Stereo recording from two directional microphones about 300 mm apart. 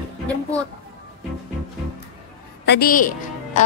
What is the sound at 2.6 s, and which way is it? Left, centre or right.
Speech, left.